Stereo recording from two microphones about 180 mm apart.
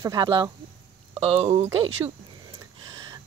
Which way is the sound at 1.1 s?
35° right (ahead or behind).